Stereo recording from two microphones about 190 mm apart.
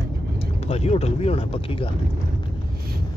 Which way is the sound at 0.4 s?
35° left (ahead or behind).